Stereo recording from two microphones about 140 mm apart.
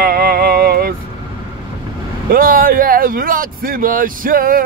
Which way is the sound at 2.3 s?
90° right.